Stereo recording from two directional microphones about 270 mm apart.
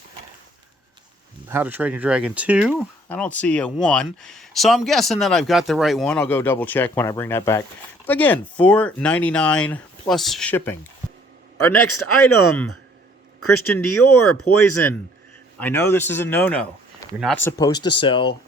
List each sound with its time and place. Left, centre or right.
1.5 s speech: centre
11.5 s a man's voice: left
15.6 s speech: centre